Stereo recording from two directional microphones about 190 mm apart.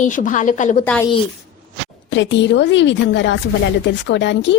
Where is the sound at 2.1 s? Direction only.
70° left (ahead or behind).